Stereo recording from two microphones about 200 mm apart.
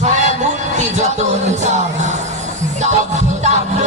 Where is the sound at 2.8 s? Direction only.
35° right (ahead or behind).